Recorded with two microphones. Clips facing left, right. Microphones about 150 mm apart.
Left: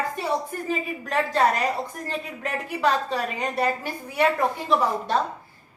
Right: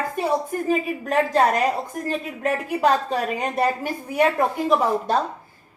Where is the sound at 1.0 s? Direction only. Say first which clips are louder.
Right 3 dB; 45° right (ahead or behind).